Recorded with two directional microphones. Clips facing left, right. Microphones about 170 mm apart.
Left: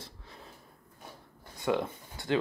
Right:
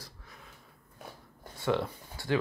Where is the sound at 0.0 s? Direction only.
25° left (ahead or behind).